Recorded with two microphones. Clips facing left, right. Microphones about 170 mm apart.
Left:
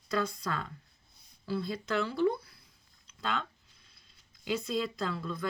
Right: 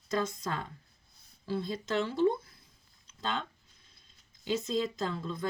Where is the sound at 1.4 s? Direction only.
40° right (ahead or behind).